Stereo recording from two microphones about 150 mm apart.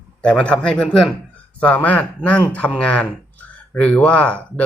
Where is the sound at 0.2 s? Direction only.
10° left (ahead or behind).